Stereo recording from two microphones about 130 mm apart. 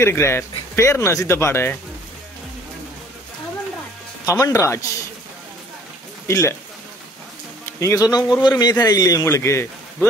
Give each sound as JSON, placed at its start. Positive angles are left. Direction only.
{"t": 0.0, "sound": "a man's voice", "side_deg": 20}
{"t": 4.3, "sound": "a man's voice", "side_deg": 25}
{"t": 6.2, "sound": "speech", "side_deg": 25}
{"t": 7.8, "sound": "a man's voice", "side_deg": 25}